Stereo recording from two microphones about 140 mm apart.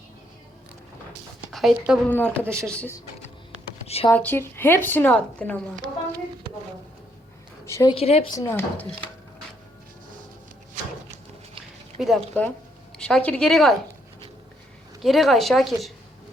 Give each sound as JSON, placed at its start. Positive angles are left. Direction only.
{"t": 1.5, "sound": "a woman's voice", "side_deg": 0}
{"t": 2.0, "sound": "a woman's voice", "side_deg": 10}
{"t": 3.8, "sound": "a sound", "side_deg": 45}
{"t": 4.1, "sound": "a woman's voice", "side_deg": 15}
{"t": 7.6, "sound": "a woman's voice", "side_deg": 20}
{"t": 7.9, "sound": "speech", "side_deg": 45}
{"t": 8.3, "sound": "speech", "side_deg": 20}
{"t": 11.9, "sound": "speech", "side_deg": 0}
{"t": 12.3, "sound": "a woman's voice", "side_deg": 10}
{"t": 15.0, "sound": "a woman's voice", "side_deg": 0}